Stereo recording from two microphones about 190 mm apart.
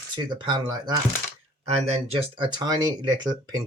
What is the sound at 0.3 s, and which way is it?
Speech, 25° right (ahead or behind).